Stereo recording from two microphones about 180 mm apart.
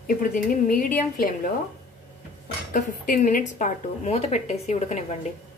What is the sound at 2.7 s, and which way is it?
A woman's voice, 50° left (ahead or behind).